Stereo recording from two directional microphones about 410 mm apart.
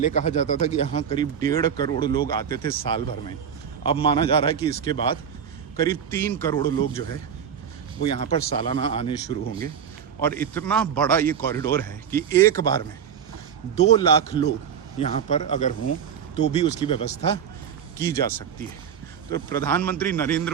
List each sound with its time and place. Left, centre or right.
0.0 s speech: centre
8.0 s a man's voice: centre
19.3 s a man's voice: centre